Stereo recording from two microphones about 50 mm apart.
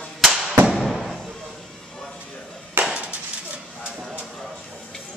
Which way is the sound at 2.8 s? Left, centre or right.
Right.